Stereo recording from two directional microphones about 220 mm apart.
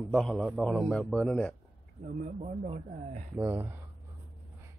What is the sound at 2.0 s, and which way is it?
A man's voice, 35° right (ahead or behind).